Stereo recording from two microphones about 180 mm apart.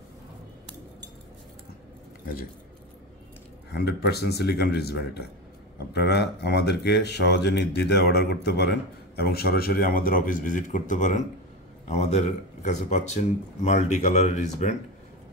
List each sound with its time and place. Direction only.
3.7 s speech: 65° left (ahead or behind); by 14.8 s 40° left (ahead or behind)